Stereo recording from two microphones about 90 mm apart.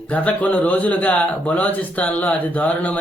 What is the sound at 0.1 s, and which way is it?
Speech, 15° left (ahead or behind).